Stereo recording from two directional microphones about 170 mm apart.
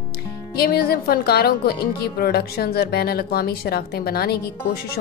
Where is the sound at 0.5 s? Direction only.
65° left (ahead or behind).